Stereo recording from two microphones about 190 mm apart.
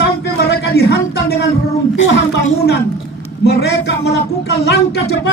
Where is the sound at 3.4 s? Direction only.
60° left (ahead or behind).